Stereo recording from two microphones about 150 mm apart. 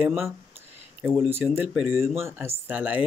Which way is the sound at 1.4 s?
5° right (ahead or behind).